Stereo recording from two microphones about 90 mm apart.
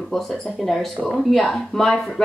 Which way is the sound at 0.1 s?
Centre (ahead or behind).